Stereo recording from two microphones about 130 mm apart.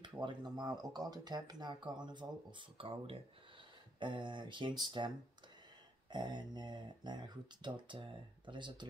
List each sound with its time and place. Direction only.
0.0 s speech: 35° right (ahead or behind)